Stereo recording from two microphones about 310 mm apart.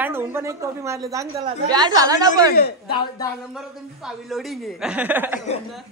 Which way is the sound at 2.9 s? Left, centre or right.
Centre.